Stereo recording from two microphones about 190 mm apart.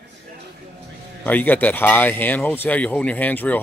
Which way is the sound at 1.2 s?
10° left (ahead or behind).